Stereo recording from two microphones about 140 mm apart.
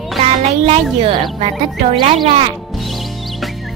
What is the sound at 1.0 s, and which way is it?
Speech, 40° right (ahead or behind).